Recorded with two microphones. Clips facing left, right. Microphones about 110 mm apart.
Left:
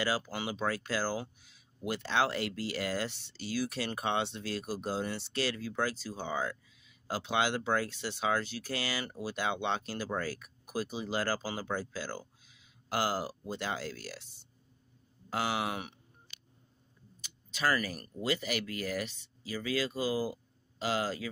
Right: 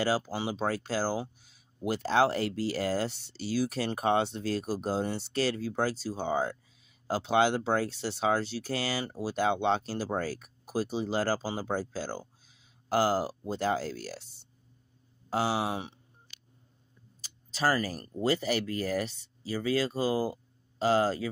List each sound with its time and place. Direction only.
0.0 s speech: 40° right (ahead or behind)
17.2 s speech: 35° right (ahead or behind)